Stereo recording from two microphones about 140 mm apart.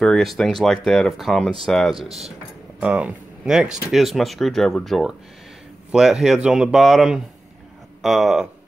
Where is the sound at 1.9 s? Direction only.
45° right (ahead or behind).